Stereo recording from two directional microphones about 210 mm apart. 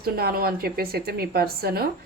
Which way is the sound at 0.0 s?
45° right (ahead or behind).